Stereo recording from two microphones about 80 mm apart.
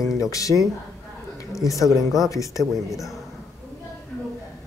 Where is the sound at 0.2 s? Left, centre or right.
Left.